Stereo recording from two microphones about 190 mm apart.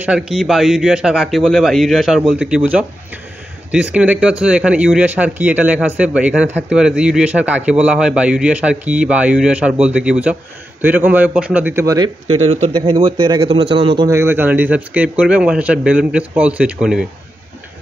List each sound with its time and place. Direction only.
0.0 s a man's voice: 5° right (ahead or behind)
3.7 s speech: 5° right (ahead or behind)
12.4 s a man's voice: 30° right (ahead or behind); by 17.0 s 5° right (ahead or behind)